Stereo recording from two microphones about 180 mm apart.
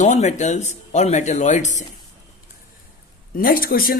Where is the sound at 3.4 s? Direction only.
55° left (ahead or behind).